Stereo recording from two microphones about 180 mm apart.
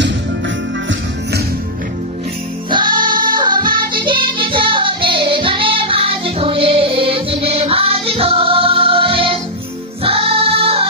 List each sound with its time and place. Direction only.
2.7 s music: 25° right (ahead or behind)